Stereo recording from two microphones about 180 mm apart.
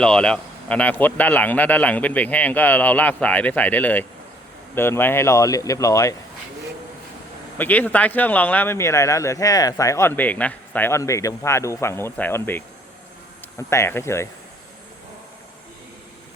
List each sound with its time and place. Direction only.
0.0 s speech: 5° left (ahead or behind)
7.6 s speech: 10° left (ahead or behind)